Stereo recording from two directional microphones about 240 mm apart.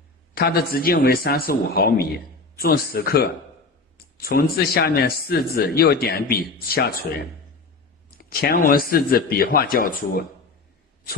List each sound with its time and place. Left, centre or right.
0.3 s speech: left
8.2 s speech: left